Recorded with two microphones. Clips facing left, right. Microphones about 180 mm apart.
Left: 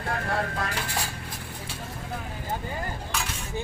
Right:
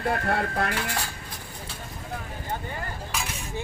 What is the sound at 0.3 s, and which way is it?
Speech, 65° right (ahead or behind).